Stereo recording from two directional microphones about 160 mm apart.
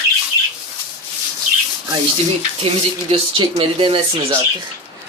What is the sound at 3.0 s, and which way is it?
Speech, 35° right (ahead or behind).